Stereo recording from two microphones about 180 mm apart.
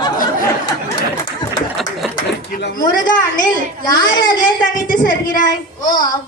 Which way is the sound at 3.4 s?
25° left (ahead or behind).